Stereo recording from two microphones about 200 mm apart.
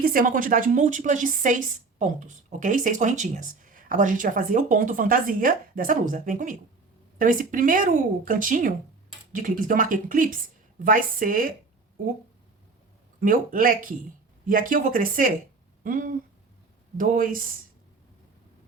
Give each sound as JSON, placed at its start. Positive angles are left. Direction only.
{"t": 0.0, "sound": "a woman's voice", "side_deg": -45}
{"t": 13.1, "sound": "speech", "side_deg": -45}